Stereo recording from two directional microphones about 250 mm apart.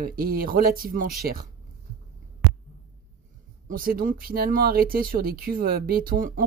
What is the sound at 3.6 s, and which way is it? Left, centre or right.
Speech, right.